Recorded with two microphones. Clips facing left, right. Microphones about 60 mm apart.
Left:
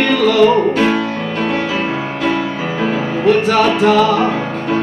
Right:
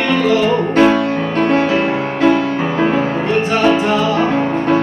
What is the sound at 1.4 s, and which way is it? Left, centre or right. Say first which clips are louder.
Music: right 5 dB; right.